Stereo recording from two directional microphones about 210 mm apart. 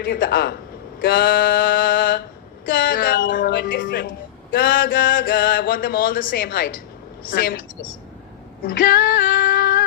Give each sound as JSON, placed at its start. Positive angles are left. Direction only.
{"t": 0.0, "sound": "mantra", "side_deg": 45}
{"t": 7.2, "sound": "a woman's voice", "side_deg": 45}
{"t": 8.6, "sound": "female singing", "side_deg": 45}